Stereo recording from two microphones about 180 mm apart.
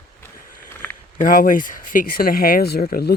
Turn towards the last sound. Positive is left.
turn(degrees=55)  # may be behind; listen again after turning